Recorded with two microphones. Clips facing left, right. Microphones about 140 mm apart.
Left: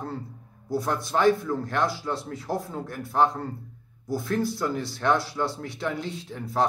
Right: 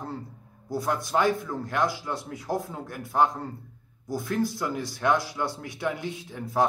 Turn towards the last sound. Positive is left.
turn(degrees=-15)  # may be behind; listen again after turning